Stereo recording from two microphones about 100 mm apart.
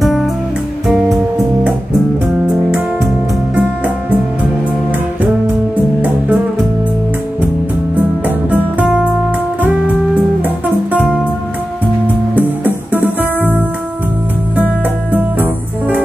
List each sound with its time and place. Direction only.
0.8 s music: centre (ahead or behind)
2.4 s music: 5° right (ahead or behind)
8.5 s music: 10° right (ahead or behind)
10.1 s music: 15° right (ahead or behind)
12.4 s music: 20° right (ahead or behind)
15.1 s music: 15° right (ahead or behind)